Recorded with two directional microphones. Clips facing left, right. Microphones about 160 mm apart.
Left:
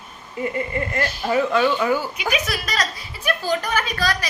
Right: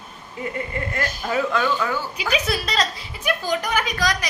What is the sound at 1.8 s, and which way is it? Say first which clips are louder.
Speech: left 4 dB; 15° left (ahead or behind).